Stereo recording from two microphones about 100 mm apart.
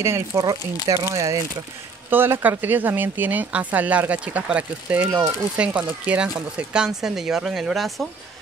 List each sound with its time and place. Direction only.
0.0 s speech: 30° right (ahead or behind)
2.0 s speech: 20° right (ahead or behind); by 8.1 s centre (ahead or behind)